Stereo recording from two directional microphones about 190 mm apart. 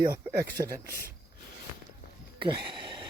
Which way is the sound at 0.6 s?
30° right (ahead or behind).